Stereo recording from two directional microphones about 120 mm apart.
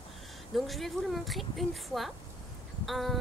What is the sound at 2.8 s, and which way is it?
Insect, centre (ahead or behind).